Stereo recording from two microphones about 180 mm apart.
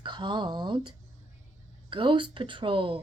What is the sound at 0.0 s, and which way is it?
A woman's voice, 25° right (ahead or behind).